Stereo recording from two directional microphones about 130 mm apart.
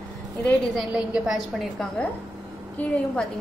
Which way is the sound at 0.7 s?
5° right (ahead or behind).